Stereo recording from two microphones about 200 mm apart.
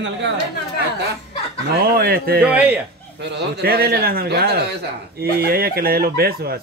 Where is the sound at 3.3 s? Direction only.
50° right (ahead or behind).